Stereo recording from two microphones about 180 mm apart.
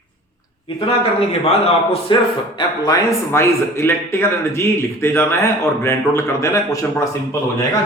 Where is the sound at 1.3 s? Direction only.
35° left (ahead or behind).